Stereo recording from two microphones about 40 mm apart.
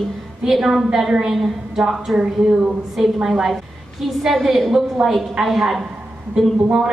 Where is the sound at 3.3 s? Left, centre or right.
Centre.